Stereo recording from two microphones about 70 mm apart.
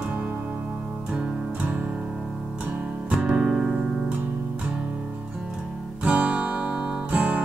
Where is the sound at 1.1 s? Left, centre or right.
Centre.